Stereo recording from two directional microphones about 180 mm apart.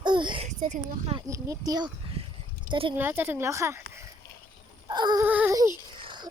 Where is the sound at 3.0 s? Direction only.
10° right (ahead or behind).